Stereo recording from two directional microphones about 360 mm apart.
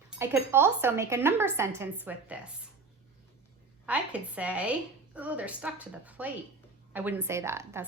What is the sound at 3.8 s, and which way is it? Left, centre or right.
A woman's voice, centre.